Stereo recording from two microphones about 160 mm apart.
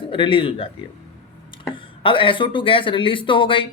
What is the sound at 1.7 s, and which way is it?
Speech, 30° left (ahead or behind).